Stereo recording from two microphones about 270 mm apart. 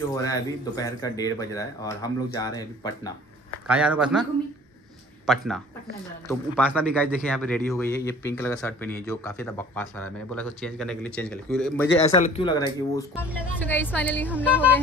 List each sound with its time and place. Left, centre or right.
0.1 s a man's voice: centre
3.6 s a man's voice: centre
11.9 s a man's voice: left
14.3 s speech: centre